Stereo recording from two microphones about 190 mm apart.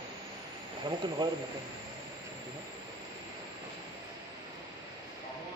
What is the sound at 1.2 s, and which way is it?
Speech, 25° right (ahead or behind).